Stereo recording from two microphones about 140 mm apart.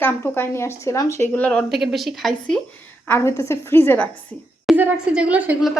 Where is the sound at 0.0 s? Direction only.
15° left (ahead or behind); by 2.6 s centre (ahead or behind).